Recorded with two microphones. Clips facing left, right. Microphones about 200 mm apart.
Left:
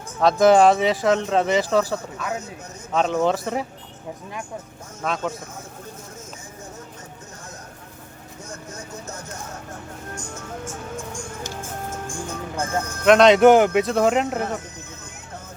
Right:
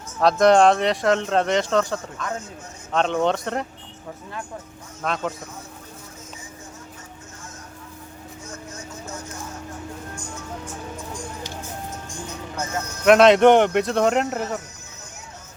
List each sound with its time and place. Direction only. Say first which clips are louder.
0.2 s speech: left 1 dB; centre (ahead or behind)
5.0 s speech: even; centre (ahead or behind)
11.4 s music: left 2 dB; 50° left (ahead or behind)
13.1 s speech: even; centre (ahead or behind)